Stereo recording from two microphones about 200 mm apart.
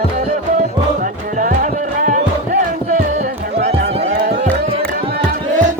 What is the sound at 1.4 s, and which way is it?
Music, 40° right (ahead or behind).